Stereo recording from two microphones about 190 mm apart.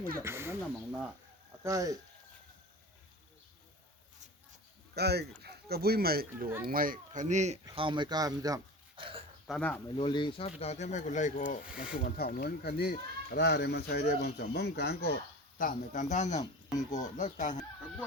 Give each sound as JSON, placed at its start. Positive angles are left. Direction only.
{"t": 0.2, "sound": "speech", "side_deg": -15}
{"t": 1.6, "sound": "speech", "side_deg": -20}
{"t": 4.9, "sound": "speech", "side_deg": -60}
{"t": 7.6, "sound": "speech", "side_deg": -25}
{"t": 9.5, "sound": "speech", "side_deg": 5}
{"t": 10.0, "sound": "speech", "side_deg": 25}
{"t": 11.7, "sound": "speech", "side_deg": -5}
{"t": 11.9, "sound": "speech", "side_deg": 50}